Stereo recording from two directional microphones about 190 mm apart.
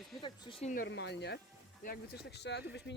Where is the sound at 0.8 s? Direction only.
65° left (ahead or behind).